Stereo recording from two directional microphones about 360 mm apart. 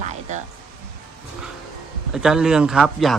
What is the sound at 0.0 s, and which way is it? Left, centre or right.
Music, centre.